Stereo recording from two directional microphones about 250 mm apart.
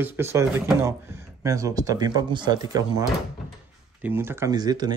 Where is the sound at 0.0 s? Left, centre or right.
Centre.